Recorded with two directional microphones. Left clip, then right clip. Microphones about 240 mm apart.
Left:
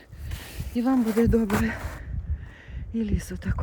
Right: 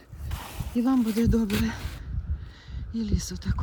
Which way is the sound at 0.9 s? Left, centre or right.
Centre.